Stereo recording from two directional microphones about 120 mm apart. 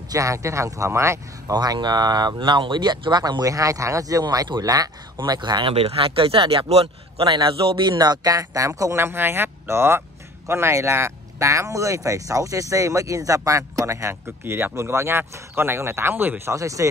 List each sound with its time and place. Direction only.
0.1 s speech: 25° right (ahead or behind)
1.6 s speech: 35° right (ahead or behind)